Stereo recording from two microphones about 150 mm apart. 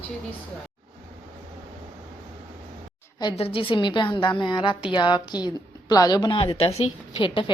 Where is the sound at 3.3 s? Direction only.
40° left (ahead or behind).